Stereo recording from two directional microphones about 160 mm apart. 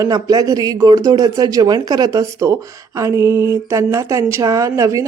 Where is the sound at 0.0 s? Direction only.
20° right (ahead or behind).